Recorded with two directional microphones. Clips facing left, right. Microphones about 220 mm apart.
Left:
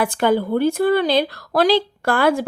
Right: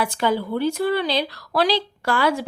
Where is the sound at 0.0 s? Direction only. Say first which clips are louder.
Left 4 dB; 55° left (ahead or behind).